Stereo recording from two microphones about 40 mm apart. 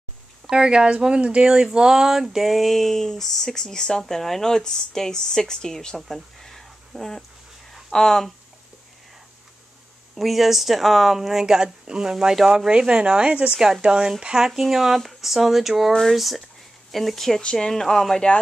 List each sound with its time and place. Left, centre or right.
0.5 s speech: centre
6.0 s a sound: centre
7.9 s speech: centre
10.1 s speech: centre
11.4 s speech: centre
13.5 s speech: centre
15.9 s speech: centre
17.4 s speech: centre
18.1 s speech: left